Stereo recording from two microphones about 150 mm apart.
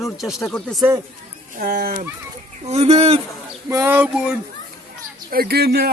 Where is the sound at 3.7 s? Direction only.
15° right (ahead or behind).